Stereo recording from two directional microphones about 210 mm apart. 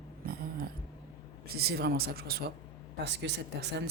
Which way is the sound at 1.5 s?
50° right (ahead or behind).